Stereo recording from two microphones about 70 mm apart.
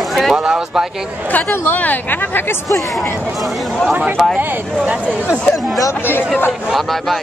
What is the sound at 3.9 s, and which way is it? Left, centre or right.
Speech, right.